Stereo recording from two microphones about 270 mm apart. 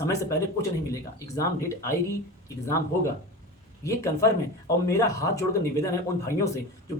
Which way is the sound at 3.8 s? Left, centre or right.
Centre.